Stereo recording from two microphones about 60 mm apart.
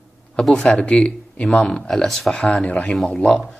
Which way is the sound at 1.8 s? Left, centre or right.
Centre.